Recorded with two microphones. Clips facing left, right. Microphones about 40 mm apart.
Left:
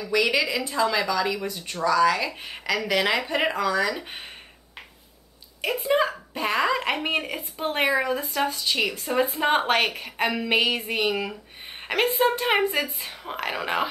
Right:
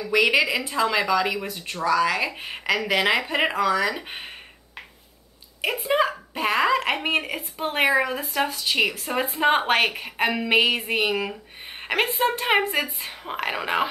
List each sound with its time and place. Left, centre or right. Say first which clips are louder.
0.0 s speech: right 3 dB; right
5.9 s a woman's voice: even; centre
8.2 s a woman's voice: right 1 dB; right; by 13.8 s centre